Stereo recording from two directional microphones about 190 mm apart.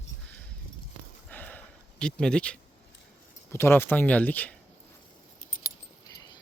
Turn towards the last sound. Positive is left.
turn(degrees=10)  # may be behind; listen again after turning